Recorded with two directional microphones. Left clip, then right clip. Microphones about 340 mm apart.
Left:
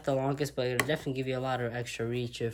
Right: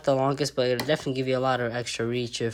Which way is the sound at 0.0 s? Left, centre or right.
Centre.